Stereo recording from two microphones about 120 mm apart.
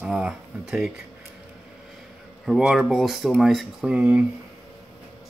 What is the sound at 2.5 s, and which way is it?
Speech, 5° right (ahead or behind).